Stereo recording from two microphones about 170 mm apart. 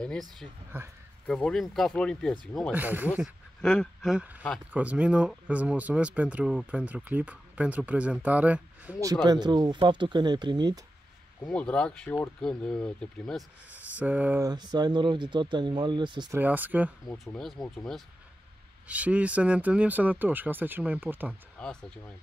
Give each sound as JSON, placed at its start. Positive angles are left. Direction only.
{"t": 0.0, "sound": "speech", "side_deg": 5}
{"t": 0.7, "sound": "speech", "side_deg": -10}
{"t": 1.2, "sound": "speech", "side_deg": 5}
{"t": 2.7, "sound": "speech", "side_deg": -10}
{"t": 3.6, "sound": "speech", "side_deg": 5}
{"t": 9.0, "sound": "speech", "side_deg": -25}
{"t": 11.4, "sound": "speech", "side_deg": 5}
{"t": 13.9, "sound": "speech", "side_deg": -10}
{"t": 14.4, "sound": "speech", "side_deg": -25}
{"t": 16.3, "sound": "speech", "side_deg": -10}
{"t": 17.1, "sound": "speech", "side_deg": 5}
{"t": 18.9, "sound": "speech", "side_deg": -10}
{"t": 21.5, "sound": "speech", "side_deg": 5}